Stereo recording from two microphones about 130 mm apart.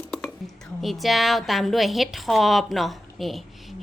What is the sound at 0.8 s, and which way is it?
A woman's voice, centre (ahead or behind).